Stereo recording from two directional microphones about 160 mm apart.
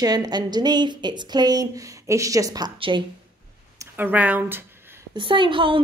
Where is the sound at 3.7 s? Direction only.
10° right (ahead or behind).